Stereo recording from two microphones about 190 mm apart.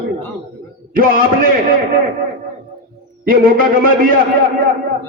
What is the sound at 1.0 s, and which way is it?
Speech, 50° right (ahead or behind).